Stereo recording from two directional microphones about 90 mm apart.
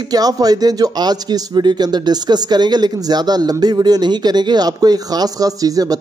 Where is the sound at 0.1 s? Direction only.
45° right (ahead or behind).